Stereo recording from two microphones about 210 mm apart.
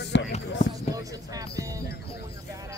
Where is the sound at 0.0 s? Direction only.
55° left (ahead or behind).